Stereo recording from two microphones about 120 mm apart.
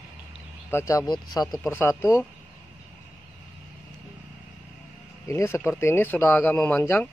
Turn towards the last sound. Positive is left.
turn(degrees=15)  # may be behind; listen again after turning